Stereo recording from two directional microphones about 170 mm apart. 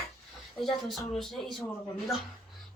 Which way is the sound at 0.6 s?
Centre (ahead or behind).